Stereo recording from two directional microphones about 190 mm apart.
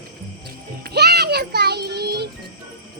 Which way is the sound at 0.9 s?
60° right (ahead or behind).